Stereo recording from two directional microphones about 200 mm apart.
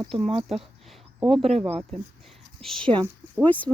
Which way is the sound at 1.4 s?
30° right (ahead or behind).